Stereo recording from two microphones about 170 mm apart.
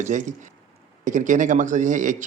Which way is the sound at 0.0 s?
45° right (ahead or behind).